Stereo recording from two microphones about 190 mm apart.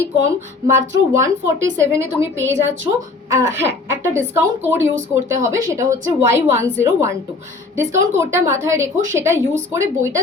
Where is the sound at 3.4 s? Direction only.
15° right (ahead or behind).